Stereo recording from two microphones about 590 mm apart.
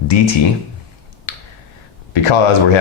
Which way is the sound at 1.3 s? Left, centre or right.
Left.